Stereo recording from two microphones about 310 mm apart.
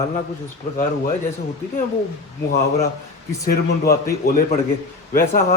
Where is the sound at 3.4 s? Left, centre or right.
Left.